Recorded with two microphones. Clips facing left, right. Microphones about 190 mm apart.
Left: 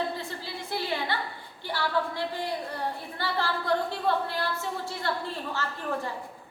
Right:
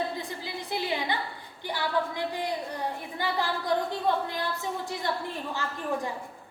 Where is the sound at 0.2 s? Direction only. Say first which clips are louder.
Right 1 dB; 15° right (ahead or behind).